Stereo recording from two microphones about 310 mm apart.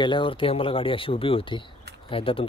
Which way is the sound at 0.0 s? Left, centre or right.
Centre.